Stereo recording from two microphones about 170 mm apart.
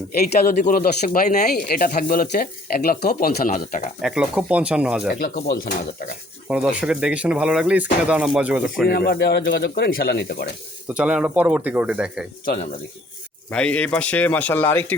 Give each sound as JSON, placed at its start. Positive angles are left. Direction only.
{"t": 0.5, "sound": "speech", "side_deg": 50}
{"t": 4.0, "sound": "speech", "side_deg": -5}
{"t": 5.2, "sound": "speech", "side_deg": 60}
{"t": 6.5, "sound": "speech", "side_deg": -5}
{"t": 8.9, "sound": "speech", "side_deg": 70}
{"t": 10.8, "sound": "speech", "side_deg": -5}
{"t": 13.5, "sound": "speech", "side_deg": 5}